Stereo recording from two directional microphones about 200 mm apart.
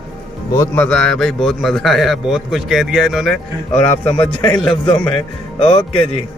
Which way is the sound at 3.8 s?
35° left (ahead or behind).